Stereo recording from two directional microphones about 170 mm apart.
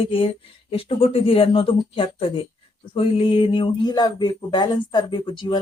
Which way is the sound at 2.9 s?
30° left (ahead or behind).